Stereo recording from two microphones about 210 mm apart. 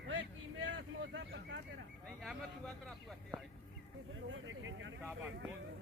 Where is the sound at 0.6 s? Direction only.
60° right (ahead or behind).